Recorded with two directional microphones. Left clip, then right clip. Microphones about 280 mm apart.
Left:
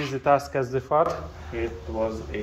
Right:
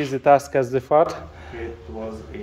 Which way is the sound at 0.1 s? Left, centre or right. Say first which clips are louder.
Right 6 dB; right.